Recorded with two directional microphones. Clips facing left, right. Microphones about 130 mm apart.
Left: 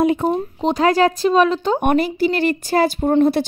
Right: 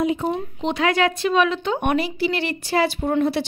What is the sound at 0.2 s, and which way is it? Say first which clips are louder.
A woman's voice: left 5 dB; 40° left (ahead or behind).